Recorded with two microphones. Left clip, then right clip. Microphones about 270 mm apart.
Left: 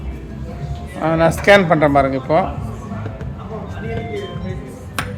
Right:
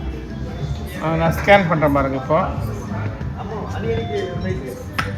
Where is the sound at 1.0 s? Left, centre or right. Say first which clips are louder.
Left 5 dB; centre.